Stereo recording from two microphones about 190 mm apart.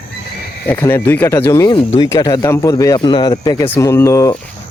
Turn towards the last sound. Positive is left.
turn(degrees=15)  # may be behind; listen again after turning